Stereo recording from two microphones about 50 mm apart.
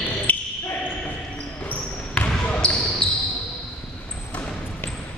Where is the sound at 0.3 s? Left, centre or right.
Left.